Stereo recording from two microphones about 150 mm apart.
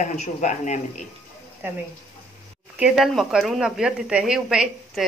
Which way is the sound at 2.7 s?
5° right (ahead or behind).